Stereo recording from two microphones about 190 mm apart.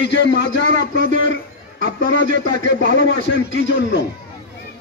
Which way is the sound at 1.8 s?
70° left (ahead or behind).